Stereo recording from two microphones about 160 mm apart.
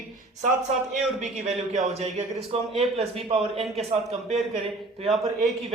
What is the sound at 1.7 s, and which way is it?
A man's voice, 45° right (ahead or behind).